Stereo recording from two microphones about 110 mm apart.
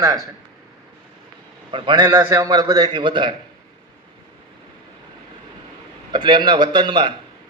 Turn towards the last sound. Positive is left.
turn(degrees=-50)  # may be behind; listen again after turning